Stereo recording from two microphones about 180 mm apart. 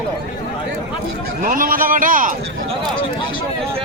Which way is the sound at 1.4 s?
50° right (ahead or behind).